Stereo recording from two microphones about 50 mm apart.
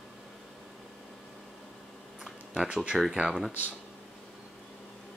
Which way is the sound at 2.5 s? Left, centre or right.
Centre.